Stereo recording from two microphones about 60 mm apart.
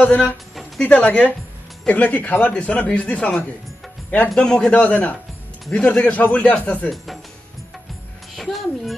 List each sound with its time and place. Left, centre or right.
0.0 s speech: left
4.4 s a man's voice: centre
4.7 s speech: left
8.4 s music: centre